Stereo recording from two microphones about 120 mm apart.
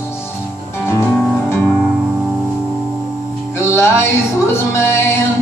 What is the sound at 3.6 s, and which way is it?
Music, 20° left (ahead or behind).